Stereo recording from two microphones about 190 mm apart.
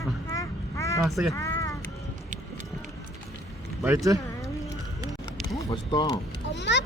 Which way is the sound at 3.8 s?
15° right (ahead or behind).